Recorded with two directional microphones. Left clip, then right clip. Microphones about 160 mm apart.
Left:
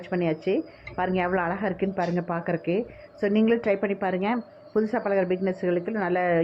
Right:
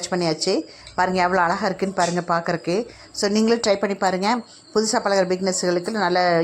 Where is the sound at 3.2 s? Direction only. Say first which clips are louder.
Right 4 dB; 35° right (ahead or behind).